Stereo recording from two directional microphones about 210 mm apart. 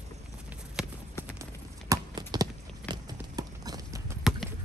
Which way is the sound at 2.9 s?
20° right (ahead or behind).